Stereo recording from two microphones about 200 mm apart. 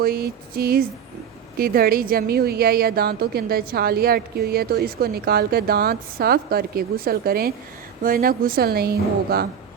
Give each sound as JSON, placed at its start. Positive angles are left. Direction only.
{"t": 0.0, "sound": "a woman's voice", "side_deg": -50}